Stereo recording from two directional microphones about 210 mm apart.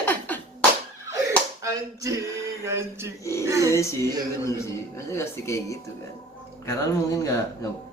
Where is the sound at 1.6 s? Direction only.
15° right (ahead or behind).